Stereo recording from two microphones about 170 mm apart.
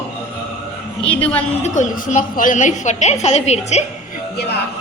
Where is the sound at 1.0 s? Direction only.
10° left (ahead or behind).